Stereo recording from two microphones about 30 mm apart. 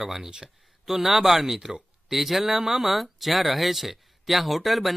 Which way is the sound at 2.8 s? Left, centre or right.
Centre.